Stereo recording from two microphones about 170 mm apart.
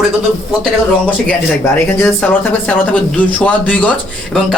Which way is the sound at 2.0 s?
10° left (ahead or behind).